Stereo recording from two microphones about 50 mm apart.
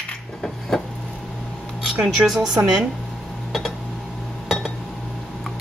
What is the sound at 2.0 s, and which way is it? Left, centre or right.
Speech, centre.